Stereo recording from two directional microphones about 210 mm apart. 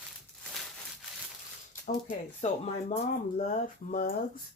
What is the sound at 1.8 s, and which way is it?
Speech, 35° left (ahead or behind).